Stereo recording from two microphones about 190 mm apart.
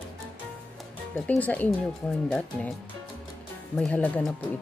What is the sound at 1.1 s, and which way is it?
Speech, 5° left (ahead or behind).